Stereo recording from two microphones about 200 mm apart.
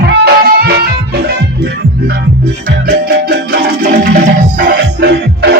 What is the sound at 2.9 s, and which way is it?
Music, 55° right (ahead or behind).